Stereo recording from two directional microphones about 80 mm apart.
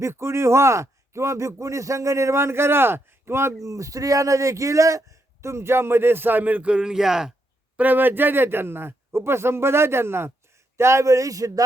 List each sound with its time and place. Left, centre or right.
0.0 s a man's voice: right
3.7 s a man's voice: right; by 7.3 s centre
7.8 s a man's voice: right